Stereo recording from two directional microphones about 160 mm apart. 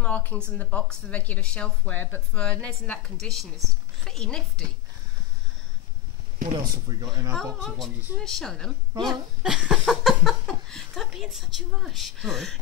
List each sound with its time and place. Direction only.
0.0 s a woman's voice: 10° left (ahead or behind)
6.7 s speech: 25° right (ahead or behind)
7.6 s speech: 5° left (ahead or behind)